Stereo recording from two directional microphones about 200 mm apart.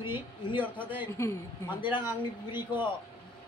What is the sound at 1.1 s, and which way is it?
Speech, 15° left (ahead or behind).